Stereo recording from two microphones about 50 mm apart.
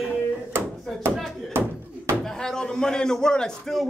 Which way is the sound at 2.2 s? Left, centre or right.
Centre.